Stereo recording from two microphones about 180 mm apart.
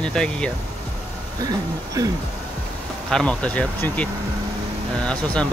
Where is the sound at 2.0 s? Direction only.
20° right (ahead or behind).